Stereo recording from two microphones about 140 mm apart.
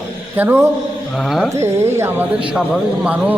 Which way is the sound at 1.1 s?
Centre (ahead or behind).